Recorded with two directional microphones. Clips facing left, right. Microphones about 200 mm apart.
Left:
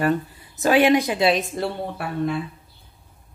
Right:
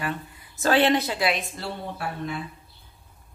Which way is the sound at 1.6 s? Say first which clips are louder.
Left 6 dB; 60° left (ahead or behind).